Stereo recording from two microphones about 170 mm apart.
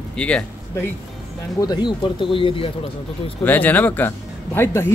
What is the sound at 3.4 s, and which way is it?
A man's voice, 10° left (ahead or behind).